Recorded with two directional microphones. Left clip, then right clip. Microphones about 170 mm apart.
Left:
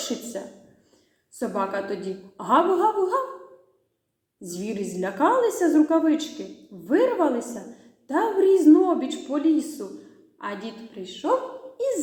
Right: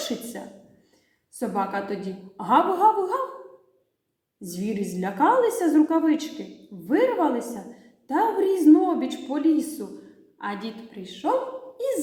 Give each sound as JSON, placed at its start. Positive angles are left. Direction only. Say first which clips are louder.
{"t": 1.4, "sound": "a woman's voice", "louder": "even", "side_deg": -15}
{"t": 4.4, "sound": "a woman's voice", "louder": "even", "side_deg": -15}